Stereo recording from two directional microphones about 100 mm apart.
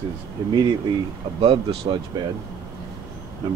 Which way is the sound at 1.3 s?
65° right (ahead or behind).